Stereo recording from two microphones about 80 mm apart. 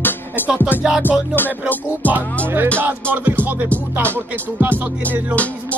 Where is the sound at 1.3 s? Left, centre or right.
Left.